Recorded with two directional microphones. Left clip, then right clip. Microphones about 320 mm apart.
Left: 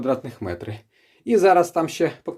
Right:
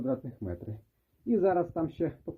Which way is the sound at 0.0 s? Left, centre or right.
Centre.